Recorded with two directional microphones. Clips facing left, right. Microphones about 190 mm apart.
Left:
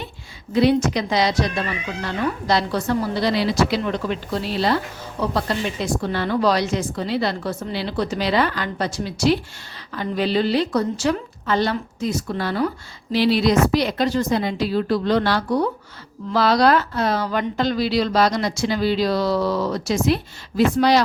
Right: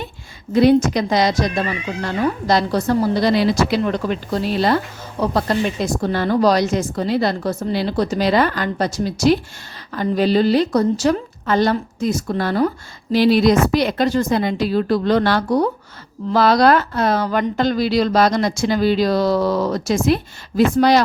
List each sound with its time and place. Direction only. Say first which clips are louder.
0.5 s a woman's voice: right 4 dB; 45° right (ahead or behind)